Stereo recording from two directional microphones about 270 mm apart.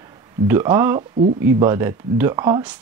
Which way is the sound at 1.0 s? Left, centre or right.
Right.